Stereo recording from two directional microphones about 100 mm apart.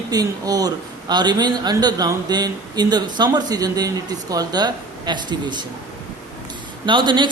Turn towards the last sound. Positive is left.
turn(degrees=-50)  # may be behind; listen again after turning